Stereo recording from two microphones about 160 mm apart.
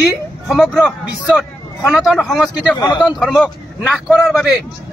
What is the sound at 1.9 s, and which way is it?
Speech, 5° right (ahead or behind).